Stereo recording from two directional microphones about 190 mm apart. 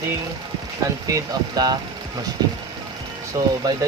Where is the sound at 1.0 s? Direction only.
20° right (ahead or behind).